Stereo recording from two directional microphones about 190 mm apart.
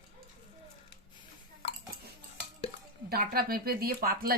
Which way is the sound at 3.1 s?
55° right (ahead or behind).